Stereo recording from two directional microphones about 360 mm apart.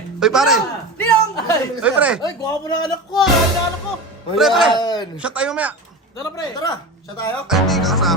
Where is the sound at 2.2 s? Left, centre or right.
Centre.